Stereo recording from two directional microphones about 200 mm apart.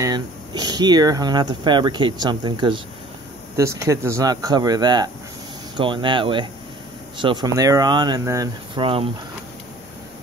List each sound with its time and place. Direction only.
0.0 s speech: 20° right (ahead or behind)